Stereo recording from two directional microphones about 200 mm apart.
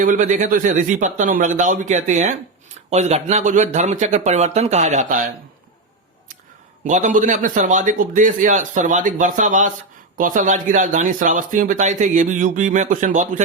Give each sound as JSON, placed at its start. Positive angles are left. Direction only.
{"t": 0.0, "sound": "speech", "side_deg": -40}
{"t": 6.8, "sound": "speech", "side_deg": -40}